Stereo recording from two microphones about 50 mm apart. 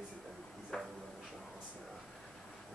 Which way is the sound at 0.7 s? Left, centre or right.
Centre.